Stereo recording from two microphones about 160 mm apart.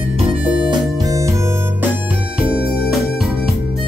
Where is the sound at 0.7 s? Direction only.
20° right (ahead or behind).